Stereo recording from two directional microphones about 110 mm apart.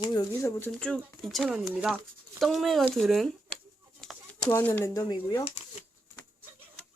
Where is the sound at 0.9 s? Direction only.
Centre (ahead or behind).